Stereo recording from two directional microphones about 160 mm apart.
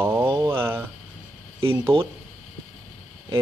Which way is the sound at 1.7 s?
35° right (ahead or behind).